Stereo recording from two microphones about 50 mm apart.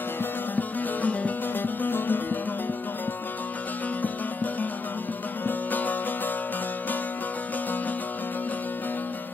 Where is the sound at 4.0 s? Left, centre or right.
Left.